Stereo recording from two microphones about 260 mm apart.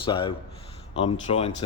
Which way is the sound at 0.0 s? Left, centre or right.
Centre.